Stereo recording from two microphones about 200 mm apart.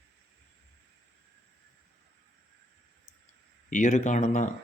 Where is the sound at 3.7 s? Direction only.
40° left (ahead or behind).